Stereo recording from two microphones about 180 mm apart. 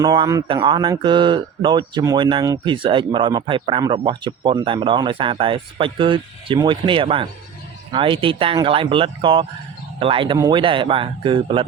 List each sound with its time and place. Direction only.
0.0 s speech: 20° right (ahead or behind)